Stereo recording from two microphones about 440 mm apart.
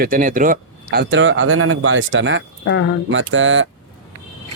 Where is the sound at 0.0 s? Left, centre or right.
Centre.